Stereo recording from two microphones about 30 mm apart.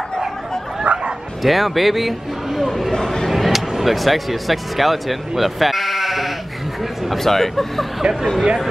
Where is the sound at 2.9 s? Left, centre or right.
Centre.